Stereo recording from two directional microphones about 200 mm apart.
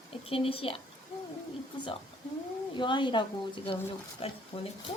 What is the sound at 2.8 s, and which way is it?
Speech, 25° left (ahead or behind).